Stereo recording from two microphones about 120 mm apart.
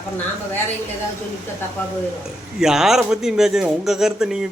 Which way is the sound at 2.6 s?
5° right (ahead or behind).